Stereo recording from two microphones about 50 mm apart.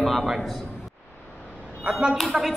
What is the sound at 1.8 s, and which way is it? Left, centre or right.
Speech, centre.